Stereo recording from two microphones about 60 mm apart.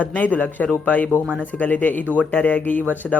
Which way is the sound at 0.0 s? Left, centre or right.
Left.